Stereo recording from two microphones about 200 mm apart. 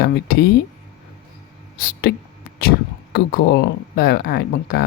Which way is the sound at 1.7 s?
50° left (ahead or behind).